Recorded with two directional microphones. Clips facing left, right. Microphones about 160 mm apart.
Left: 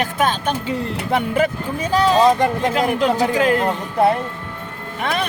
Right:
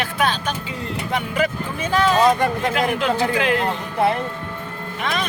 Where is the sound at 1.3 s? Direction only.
40° left (ahead or behind).